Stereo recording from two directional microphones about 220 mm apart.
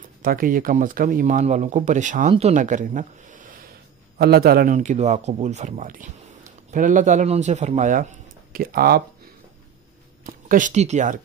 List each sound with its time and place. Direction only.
0.2 s speech: 40° right (ahead or behind)
10.2 s speech: 35° right (ahead or behind)